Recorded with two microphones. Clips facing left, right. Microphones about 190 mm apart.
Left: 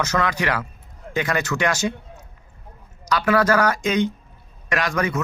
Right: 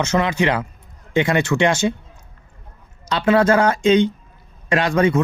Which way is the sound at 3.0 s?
25° right (ahead or behind).